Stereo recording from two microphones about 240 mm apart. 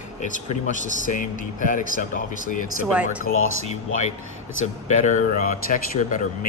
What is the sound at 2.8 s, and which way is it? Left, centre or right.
Speech, centre.